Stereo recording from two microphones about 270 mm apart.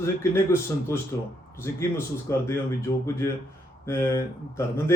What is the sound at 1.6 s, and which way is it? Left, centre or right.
A man's voice, centre.